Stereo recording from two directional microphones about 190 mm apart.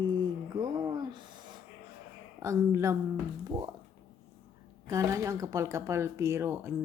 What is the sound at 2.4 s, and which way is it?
Speech, 15° right (ahead or behind).